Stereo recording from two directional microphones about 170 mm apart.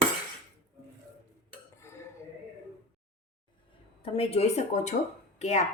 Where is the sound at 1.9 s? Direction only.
15° left (ahead or behind).